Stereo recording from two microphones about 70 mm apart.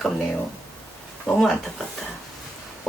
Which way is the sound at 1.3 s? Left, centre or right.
Centre.